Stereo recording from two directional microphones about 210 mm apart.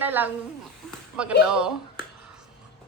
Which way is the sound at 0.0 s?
10° right (ahead or behind).